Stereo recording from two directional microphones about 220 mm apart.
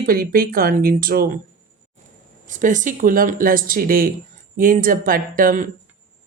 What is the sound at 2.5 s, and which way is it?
Speech, 35° right (ahead or behind).